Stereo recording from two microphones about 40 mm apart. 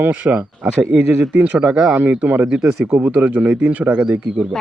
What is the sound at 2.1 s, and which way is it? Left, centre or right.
Speech, right.